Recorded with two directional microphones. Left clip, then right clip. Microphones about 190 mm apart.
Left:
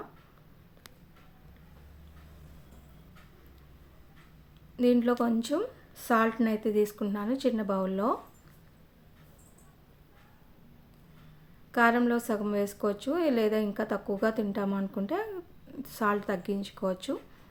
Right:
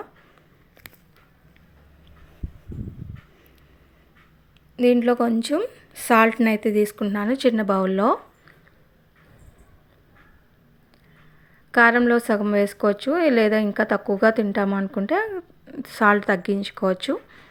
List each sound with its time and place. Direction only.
4.8 s a woman's voice: 25° right (ahead or behind)
11.7 s a woman's voice: 30° right (ahead or behind)